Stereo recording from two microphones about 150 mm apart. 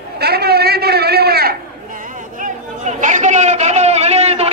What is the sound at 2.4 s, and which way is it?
Chatter, 55° right (ahead or behind).